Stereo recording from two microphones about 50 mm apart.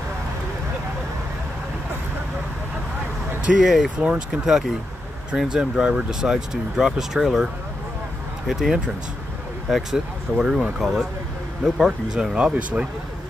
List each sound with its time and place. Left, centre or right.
3.5 s speech: centre
4.0 s speech: right
4.5 s speech: centre
8.5 s speech: centre
10.4 s speech: centre
10.8 s speech: centre
12.4 s speech: right